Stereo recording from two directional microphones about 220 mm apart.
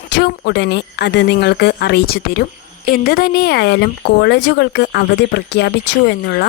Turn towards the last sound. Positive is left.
turn(degrees=45)  # may be behind; listen again after turning